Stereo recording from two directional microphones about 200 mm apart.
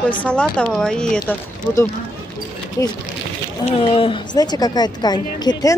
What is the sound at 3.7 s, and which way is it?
Speech, 25° left (ahead or behind).